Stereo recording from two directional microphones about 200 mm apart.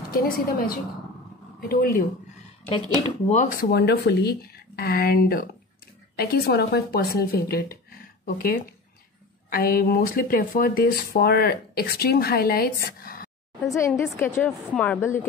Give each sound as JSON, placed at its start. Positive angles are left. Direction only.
{"t": 0.1, "sound": "speech", "side_deg": 45}
{"t": 3.3, "sound": "speech", "side_deg": 35}
{"t": 3.7, "sound": "speech", "side_deg": 55}
{"t": 13.7, "sound": "a woman's voice", "side_deg": 15}